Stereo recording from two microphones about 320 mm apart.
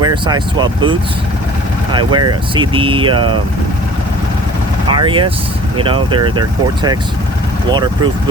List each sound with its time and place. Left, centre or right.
0.0 s speech: centre
1.9 s speech: centre
4.9 s speech: centre
7.7 s speech: centre